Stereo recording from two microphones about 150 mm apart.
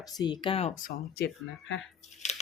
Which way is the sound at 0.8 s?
90° left.